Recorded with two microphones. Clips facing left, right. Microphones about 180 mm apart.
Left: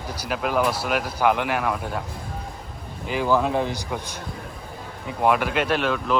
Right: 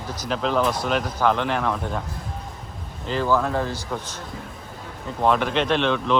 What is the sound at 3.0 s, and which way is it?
Speech, 10° left (ahead or behind).